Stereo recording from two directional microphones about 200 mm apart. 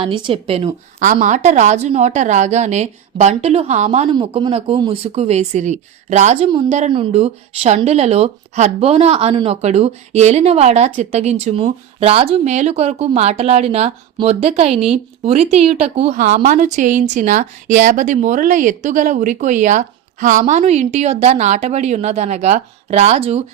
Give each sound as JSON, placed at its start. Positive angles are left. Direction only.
{"t": 0.0, "sound": "speech", "side_deg": -25}
{"t": 0.9, "sound": "speech", "side_deg": -40}